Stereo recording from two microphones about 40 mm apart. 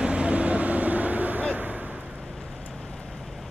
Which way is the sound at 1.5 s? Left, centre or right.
Right.